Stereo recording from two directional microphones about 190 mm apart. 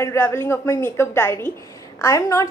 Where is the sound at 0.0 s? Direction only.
15° left (ahead or behind).